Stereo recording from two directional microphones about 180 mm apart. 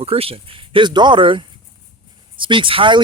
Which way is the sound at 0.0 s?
35° right (ahead or behind).